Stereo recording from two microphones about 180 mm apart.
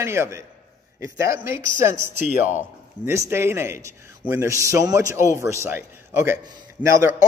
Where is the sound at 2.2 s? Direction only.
45° left (ahead or behind).